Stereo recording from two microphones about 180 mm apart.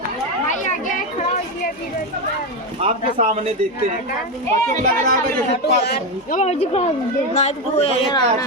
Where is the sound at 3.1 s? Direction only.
40° right (ahead or behind).